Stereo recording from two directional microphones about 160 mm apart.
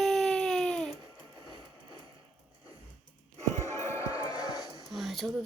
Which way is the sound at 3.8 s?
20° left (ahead or behind).